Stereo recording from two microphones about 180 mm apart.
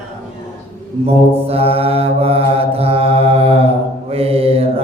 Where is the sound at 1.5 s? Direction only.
35° right (ahead or behind).